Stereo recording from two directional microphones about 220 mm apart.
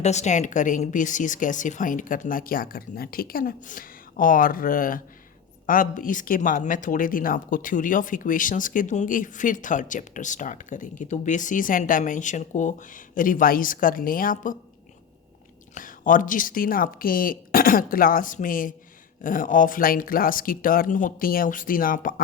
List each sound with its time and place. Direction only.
0.0 s speech: 30° left (ahead or behind)
15.7 s speech: 35° left (ahead or behind)